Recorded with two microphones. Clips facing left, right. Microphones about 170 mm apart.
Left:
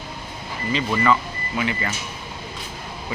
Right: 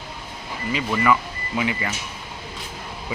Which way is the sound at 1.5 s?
15° right (ahead or behind).